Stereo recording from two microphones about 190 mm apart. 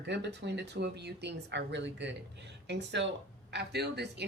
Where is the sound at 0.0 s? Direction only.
65° right (ahead or behind).